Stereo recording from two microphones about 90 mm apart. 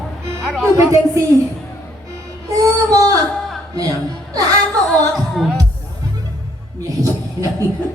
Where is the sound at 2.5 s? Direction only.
40° right (ahead or behind).